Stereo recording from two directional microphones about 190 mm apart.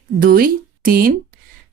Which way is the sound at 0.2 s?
50° right (ahead or behind).